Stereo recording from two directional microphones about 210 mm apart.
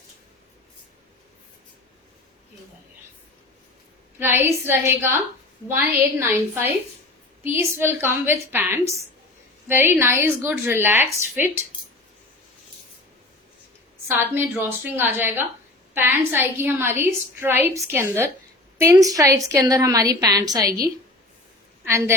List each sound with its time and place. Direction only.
4.2 s a woman's voice: 10° right (ahead or behind)
14.2 s a woman's voice: 10° right (ahead or behind)
21.8 s a woman's voice: 10° right (ahead or behind)